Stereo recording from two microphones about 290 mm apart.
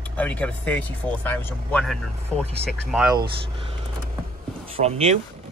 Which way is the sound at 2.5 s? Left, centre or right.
Right.